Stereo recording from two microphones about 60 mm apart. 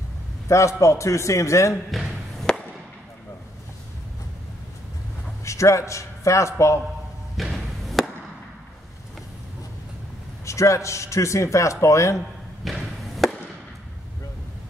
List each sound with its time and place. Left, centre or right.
0.5 s a man's voice: left
1.9 s basketball bounce: centre
5.4 s a man's voice: left
7.3 s thump: centre
10.4 s a man's voice: left
12.6 s a sound: centre